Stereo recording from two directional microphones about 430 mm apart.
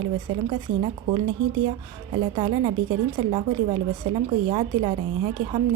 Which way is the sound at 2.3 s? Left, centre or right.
Centre.